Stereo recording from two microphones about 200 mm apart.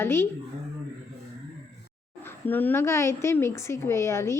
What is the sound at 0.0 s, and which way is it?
Speech, 10° left (ahead or behind).